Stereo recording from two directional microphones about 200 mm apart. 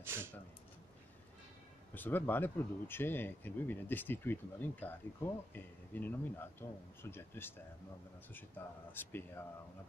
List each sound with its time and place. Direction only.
0.0 s speech: 10° right (ahead or behind)
2.0 s speech: 10° left (ahead or behind)